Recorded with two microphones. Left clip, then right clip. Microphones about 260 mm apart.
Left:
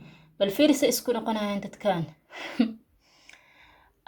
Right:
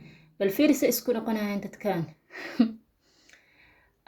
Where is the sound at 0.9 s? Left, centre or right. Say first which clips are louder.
Left 1 dB; centre.